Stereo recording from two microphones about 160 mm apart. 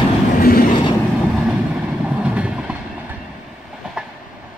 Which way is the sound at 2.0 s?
5° right (ahead or behind).